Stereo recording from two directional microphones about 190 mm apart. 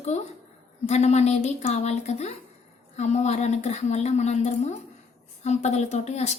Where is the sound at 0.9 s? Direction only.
35° left (ahead or behind).